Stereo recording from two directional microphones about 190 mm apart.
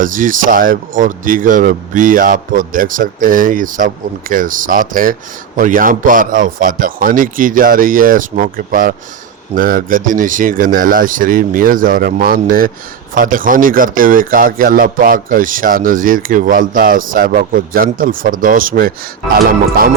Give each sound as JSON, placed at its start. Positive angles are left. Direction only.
{"t": 0.0, "sound": "speech", "side_deg": -45}